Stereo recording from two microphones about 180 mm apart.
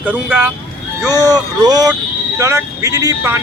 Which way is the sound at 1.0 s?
20° right (ahead or behind).